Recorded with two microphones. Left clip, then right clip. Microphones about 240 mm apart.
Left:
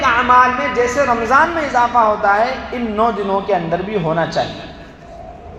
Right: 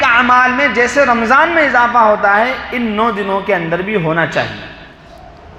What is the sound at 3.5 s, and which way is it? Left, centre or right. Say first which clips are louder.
Speech: right 2 dB; right.